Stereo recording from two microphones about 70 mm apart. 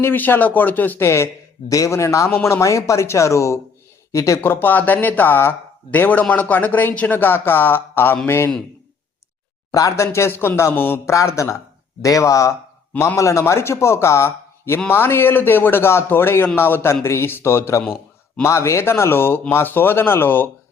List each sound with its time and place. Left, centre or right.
0.0 s speech: left
1.0 s speech: left
1.7 s speech: left
4.4 s speech: left
9.9 s speech: left
11.1 s speech: left